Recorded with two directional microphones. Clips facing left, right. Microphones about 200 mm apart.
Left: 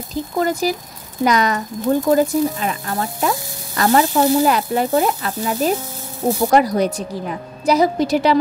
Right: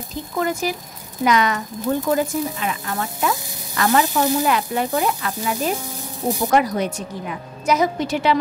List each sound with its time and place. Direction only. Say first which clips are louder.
0.4 s speech: left 3 dB; 35° left (ahead or behind)
4.1 s speech: left 4 dB; 15° left (ahead or behind)
4.5 s speech: left 3 dB; 40° left (ahead or behind)